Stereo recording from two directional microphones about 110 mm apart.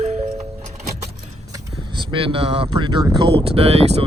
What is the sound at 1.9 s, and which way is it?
Speech, 50° right (ahead or behind).